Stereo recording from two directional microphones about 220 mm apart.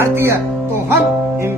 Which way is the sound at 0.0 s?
10° right (ahead or behind).